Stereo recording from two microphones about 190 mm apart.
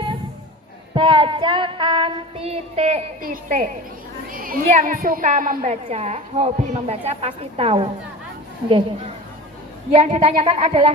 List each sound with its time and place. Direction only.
0.9 s child singing: 25° right (ahead or behind)
3.2 s a woman's voice: 45° right (ahead or behind)
9.9 s a woman's voice: 30° right (ahead or behind)